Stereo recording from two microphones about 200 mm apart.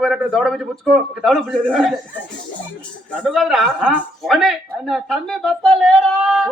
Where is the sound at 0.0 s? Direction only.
Centre (ahead or behind).